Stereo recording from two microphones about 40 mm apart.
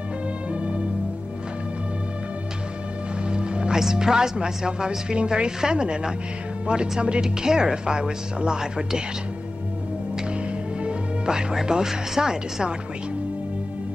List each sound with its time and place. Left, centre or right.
0.5 s music: right
3.3 s music: right
3.8 s speech: centre
10.8 s music: right
11.6 s speech: centre